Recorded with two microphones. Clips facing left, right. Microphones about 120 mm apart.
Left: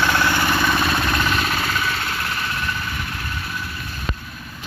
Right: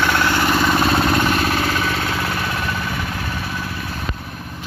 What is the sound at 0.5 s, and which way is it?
Vehicle, 25° right (ahead or behind).